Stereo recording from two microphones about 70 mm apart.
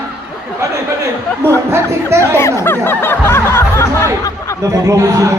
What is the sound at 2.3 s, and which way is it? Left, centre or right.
Music, left.